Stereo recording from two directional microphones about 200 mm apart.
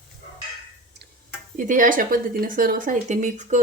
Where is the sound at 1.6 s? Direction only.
40° right (ahead or behind).